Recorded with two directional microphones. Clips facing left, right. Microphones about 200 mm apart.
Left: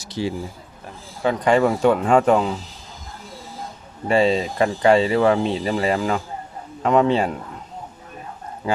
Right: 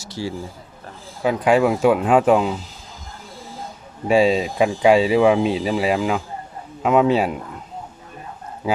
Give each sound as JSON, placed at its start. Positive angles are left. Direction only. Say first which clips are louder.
{"t": 0.0, "sound": "speech", "louder": "left 3 dB", "side_deg": 20}
{"t": 1.2, "sound": "speech", "louder": "right 1 dB", "side_deg": -5}
{"t": 4.1, "sound": "speech", "louder": "right 2 dB", "side_deg": -10}
{"t": 8.6, "sound": "speech", "louder": "right 1 dB", "side_deg": -5}